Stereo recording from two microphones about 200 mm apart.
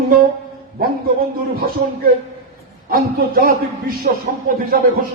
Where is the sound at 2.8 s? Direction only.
45° right (ahead or behind).